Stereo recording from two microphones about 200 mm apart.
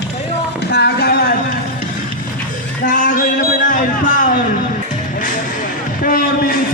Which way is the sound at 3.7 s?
40° left (ahead or behind).